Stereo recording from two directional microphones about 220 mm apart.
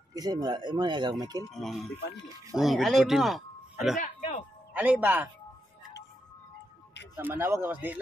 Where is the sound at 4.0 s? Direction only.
30° left (ahead or behind).